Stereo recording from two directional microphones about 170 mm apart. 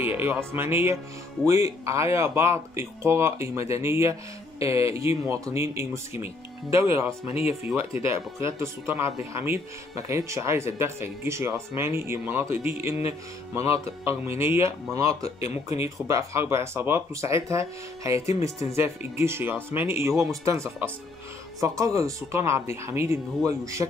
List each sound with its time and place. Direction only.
0.0 s speech: 10° right (ahead or behind)
15.4 s speech: 40° left (ahead or behind)
15.8 s speech: 15° right (ahead or behind)